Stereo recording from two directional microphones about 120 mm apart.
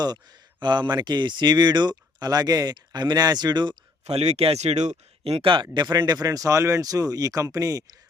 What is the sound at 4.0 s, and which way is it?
Speech, 60° right (ahead or behind).